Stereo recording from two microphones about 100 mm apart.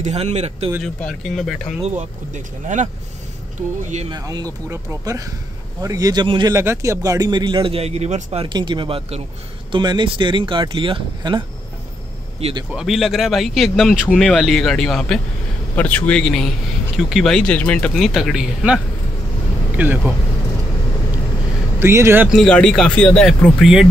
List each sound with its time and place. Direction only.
0.1 s a man's voice: 90° right
0.8 s speech: 5° left (ahead or behind)
4.1 s speech: 40° right (ahead or behind)
6.2 s speech: 50° right (ahead or behind)
6.5 s speech: 30° right (ahead or behind); by 8.5 s 90° right
8.5 s speech: 50° right (ahead or behind)
9.7 s speech: 50° right (ahead or behind)
12.4 s a man's voice: 90° right
12.7 s speech: 5° right (ahead or behind)
15.7 s speech: 15° left (ahead or behind); by 18.8 s 5° right (ahead or behind)
19.8 s speech: 20° right (ahead or behind)
21.7 s speech: 25° right (ahead or behind)
22.3 s a man's voice: 5° left (ahead or behind)
23.6 s speech: 5° right (ahead or behind)